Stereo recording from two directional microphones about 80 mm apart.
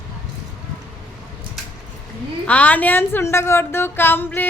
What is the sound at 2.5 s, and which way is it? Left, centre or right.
A woman's voice, centre.